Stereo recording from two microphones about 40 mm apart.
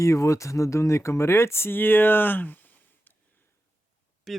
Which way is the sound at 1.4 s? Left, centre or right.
Left.